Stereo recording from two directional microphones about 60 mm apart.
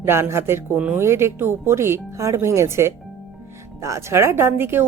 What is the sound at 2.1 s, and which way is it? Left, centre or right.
Speech, right.